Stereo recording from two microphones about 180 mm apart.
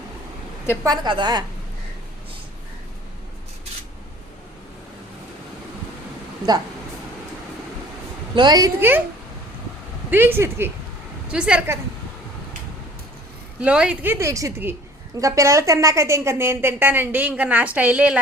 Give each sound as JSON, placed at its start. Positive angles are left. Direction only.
{"t": 0.9, "sound": "a woman's voice", "side_deg": -25}
{"t": 8.4, "sound": "a woman's voice", "side_deg": -20}
{"t": 10.1, "sound": "a woman's voice", "side_deg": -10}
{"t": 13.6, "sound": "a woman's voice", "side_deg": -5}